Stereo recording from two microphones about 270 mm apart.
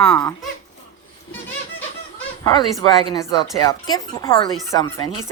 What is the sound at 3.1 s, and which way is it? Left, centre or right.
Speech, centre.